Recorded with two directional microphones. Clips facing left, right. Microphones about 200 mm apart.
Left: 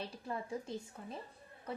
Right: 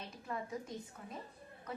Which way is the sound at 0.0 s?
30° left (ahead or behind).